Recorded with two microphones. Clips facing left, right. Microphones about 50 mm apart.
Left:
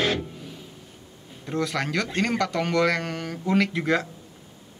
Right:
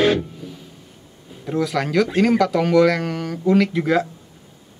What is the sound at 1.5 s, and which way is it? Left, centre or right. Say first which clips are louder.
Speech: right 5 dB; centre.